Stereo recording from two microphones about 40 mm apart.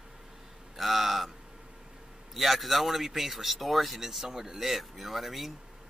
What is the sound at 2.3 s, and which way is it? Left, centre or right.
Speech, centre.